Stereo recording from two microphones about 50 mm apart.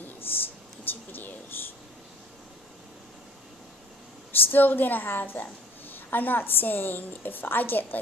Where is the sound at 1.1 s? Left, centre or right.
Left.